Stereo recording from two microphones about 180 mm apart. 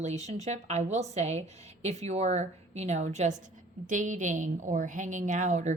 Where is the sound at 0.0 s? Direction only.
40° right (ahead or behind).